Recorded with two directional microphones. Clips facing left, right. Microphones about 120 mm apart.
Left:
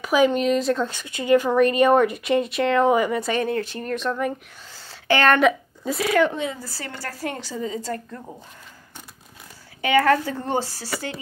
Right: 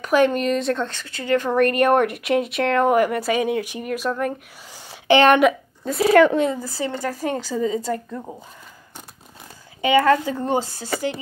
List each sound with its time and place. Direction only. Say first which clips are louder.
0.0 s speech: right 1 dB; centre (ahead or behind)
0.9 s speech: left 3 dB; 15° left (ahead or behind)
1.5 s speech: right 2 dB; centre (ahead or behind)
4.7 s a sound: right 6 dB; 15° right (ahead or behind)
6.1 s speech: right 6 dB; 65° right (ahead or behind)
6.6 s a woman's voice: right 8 dB; 20° right (ahead or behind)
9.8 s speech: right 2 dB; 20° right (ahead or behind)